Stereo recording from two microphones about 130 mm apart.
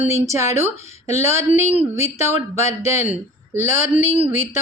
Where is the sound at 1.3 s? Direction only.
55° left (ahead or behind).